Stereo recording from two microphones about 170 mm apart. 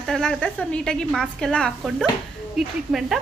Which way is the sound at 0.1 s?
5° left (ahead or behind).